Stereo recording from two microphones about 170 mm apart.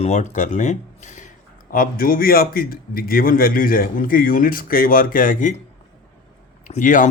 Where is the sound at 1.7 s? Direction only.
55° left (ahead or behind).